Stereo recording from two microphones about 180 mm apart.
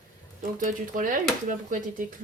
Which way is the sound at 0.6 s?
45° right (ahead or behind).